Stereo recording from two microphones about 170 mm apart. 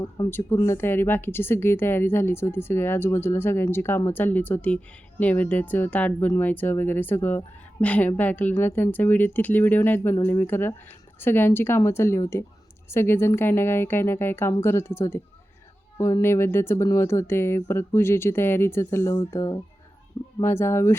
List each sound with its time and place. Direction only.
0.3 s speech: 15° left (ahead or behind)